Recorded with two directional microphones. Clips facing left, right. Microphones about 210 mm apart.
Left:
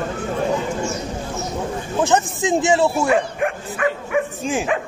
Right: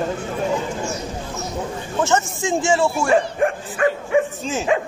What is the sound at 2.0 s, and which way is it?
Speech, 15° left (ahead or behind).